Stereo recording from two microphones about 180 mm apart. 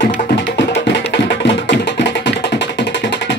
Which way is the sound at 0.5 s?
80° left.